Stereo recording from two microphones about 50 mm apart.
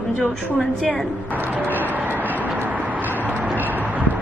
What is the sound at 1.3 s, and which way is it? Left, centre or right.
Music, right.